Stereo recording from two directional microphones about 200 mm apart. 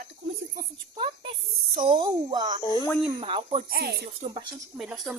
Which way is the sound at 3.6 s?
50° right (ahead or behind).